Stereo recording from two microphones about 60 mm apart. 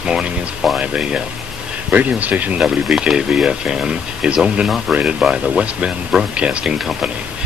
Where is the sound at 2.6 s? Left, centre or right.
Centre.